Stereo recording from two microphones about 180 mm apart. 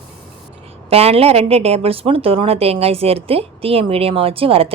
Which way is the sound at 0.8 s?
35° right (ahead or behind).